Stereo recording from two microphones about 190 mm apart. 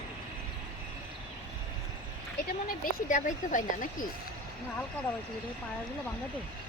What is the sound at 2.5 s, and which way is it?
Speech, 45° left (ahead or behind).